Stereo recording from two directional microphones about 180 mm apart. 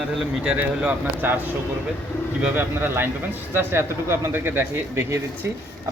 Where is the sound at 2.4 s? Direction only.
10° right (ahead or behind).